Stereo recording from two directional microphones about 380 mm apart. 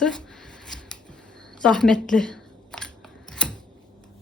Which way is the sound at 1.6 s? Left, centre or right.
Centre.